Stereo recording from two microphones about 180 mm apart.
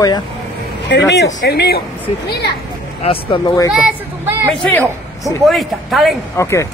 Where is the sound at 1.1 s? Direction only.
70° left (ahead or behind).